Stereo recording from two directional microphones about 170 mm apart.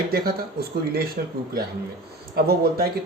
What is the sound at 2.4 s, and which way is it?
Speech, 65° right (ahead or behind).